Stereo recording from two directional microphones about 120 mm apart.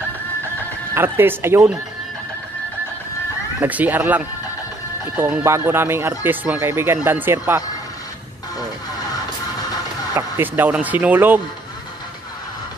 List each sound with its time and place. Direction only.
0.9 s speech: 20° right (ahead or behind)
3.6 s speech: 15° right (ahead or behind)
10.1 s speech: 20° right (ahead or behind)